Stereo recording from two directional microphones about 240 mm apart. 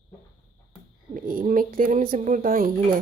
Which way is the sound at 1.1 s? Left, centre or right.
Right.